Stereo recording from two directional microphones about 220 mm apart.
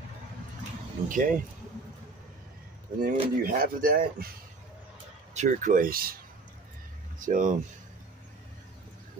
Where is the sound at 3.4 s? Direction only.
40° right (ahead or behind).